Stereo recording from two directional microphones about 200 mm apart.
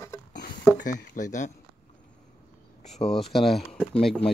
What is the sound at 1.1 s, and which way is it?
Speech, 40° left (ahead or behind).